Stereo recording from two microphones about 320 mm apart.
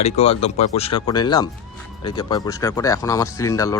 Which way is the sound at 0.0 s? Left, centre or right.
Centre.